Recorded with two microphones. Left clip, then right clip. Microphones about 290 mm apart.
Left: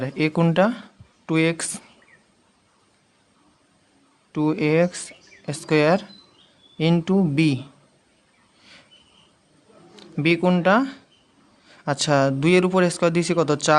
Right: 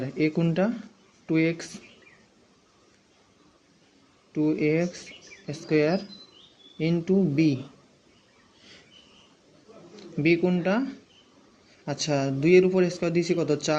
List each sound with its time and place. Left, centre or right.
0.0 s speech: left
4.3 s speech: left
9.9 s speech: left